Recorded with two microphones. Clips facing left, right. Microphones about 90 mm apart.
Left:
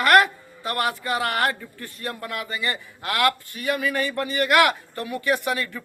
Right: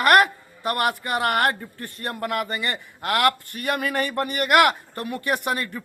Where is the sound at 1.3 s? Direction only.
50° right (ahead or behind).